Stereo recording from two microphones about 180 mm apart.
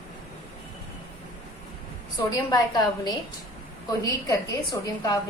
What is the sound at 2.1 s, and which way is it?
A woman's voice, 25° left (ahead or behind).